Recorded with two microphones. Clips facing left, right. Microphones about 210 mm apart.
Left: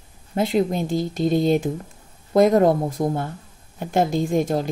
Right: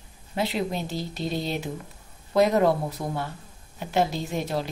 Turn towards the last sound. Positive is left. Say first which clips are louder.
# left 8 dB
turn(degrees=50)  # may be behind; listen again after turning